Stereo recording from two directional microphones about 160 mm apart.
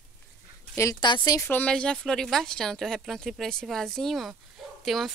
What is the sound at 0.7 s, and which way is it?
Speech, 25° left (ahead or behind).